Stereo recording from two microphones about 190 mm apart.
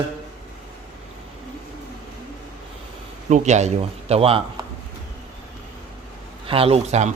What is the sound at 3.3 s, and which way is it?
Speech, 40° right (ahead or behind).